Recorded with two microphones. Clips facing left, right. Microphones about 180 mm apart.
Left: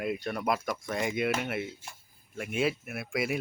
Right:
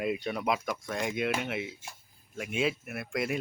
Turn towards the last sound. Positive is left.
turn(degrees=5)  # may be behind; listen again after turning